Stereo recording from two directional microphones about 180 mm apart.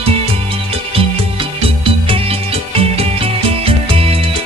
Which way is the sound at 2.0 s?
30° right (ahead or behind).